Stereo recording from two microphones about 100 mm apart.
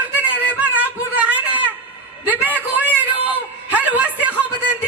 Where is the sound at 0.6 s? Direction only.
15° right (ahead or behind).